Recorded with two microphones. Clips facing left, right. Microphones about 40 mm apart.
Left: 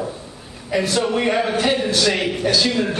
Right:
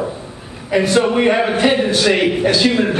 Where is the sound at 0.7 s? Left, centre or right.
Right.